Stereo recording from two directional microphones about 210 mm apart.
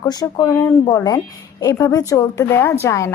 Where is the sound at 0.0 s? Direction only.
20° left (ahead or behind).